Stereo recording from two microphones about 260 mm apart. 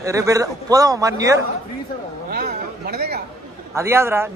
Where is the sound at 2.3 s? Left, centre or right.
Right.